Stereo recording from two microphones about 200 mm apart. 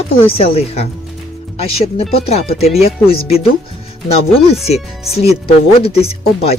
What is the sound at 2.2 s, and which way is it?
Speech, 30° left (ahead or behind).